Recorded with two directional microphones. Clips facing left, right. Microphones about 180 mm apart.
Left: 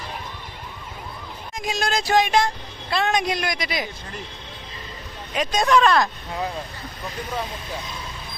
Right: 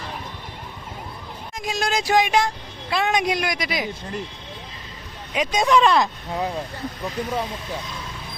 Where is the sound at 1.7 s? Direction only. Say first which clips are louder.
Even; 10° right (ahead or behind).